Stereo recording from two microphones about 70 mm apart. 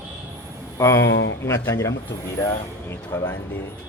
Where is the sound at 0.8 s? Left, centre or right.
Left.